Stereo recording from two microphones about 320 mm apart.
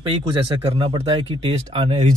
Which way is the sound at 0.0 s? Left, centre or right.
Centre.